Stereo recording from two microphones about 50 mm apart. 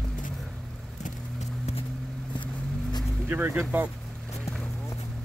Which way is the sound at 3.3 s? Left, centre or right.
Right.